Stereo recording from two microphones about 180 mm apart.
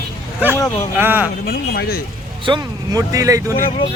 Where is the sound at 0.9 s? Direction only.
10° right (ahead or behind).